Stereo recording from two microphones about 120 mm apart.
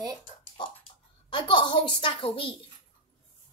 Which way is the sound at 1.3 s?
40° left (ahead or behind).